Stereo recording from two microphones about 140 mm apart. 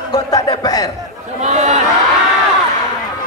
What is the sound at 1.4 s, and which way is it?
Speech, 55° right (ahead or behind).